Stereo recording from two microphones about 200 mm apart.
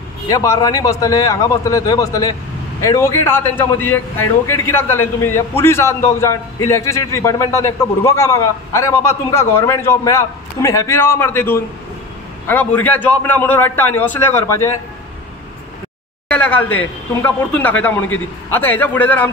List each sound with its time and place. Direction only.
0.3 s a man's voice: 15° left (ahead or behind)
16.3 s a man's voice: 5° left (ahead or behind)